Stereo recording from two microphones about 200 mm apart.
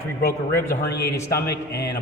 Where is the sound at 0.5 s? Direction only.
15° left (ahead or behind).